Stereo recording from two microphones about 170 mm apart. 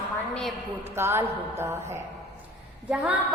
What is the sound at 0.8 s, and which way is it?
Mantra, 15° right (ahead or behind).